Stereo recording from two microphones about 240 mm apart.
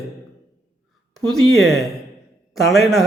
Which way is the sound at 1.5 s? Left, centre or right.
Centre.